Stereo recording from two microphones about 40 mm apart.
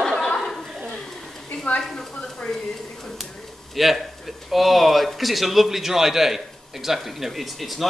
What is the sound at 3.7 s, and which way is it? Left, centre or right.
Speech, centre.